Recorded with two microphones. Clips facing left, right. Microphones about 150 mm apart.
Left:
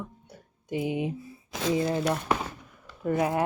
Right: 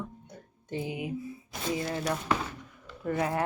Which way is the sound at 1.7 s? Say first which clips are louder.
Left 5 dB; 25° left (ahead or behind).